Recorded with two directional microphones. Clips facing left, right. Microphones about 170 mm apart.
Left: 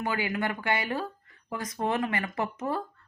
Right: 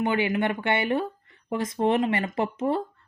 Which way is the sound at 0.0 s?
25° right (ahead or behind).